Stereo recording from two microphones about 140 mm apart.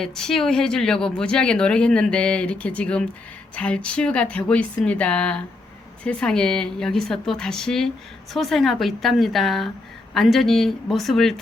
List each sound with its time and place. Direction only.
0.0 s speech: 5° left (ahead or behind)